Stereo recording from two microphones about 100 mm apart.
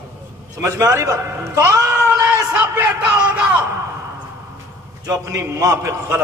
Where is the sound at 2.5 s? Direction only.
15° right (ahead or behind).